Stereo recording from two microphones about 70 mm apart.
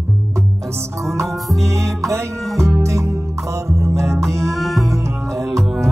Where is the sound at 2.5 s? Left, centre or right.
Centre.